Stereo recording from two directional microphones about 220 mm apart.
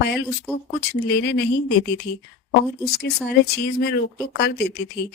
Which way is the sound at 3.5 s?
50° left (ahead or behind).